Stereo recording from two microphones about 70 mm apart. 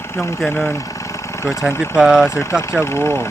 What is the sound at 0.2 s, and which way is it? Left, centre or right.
Speech, centre.